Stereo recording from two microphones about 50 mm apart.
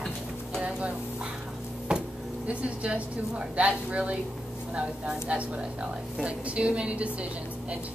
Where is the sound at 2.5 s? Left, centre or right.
Right.